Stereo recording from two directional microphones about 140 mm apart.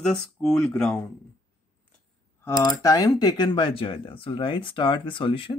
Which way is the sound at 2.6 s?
25° left (ahead or behind).